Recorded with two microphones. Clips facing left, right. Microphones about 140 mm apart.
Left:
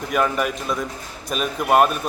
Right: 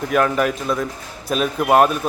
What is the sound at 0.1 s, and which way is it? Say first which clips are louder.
A man's voice: right 3 dB; centre (ahead or behind).